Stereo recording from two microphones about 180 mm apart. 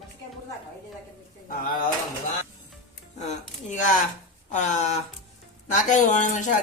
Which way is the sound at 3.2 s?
40° left (ahead or behind).